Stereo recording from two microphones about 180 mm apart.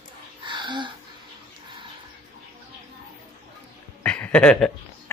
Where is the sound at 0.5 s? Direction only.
25° right (ahead or behind).